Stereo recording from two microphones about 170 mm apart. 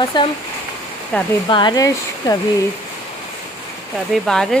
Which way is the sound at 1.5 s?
25° left (ahead or behind).